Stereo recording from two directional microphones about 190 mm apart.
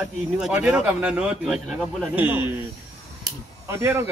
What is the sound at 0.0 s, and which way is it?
A man's voice, 5° right (ahead or behind).